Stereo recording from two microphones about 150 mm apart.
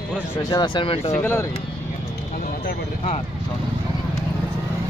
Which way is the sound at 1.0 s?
15° left (ahead or behind).